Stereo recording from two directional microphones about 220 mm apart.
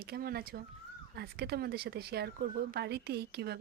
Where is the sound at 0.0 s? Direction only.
45° right (ahead or behind).